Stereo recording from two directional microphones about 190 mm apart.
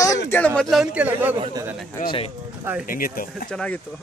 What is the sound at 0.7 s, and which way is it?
A man's voice, 5° right (ahead or behind).